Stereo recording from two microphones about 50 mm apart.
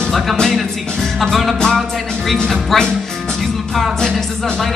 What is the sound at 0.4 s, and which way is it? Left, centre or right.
Music, centre.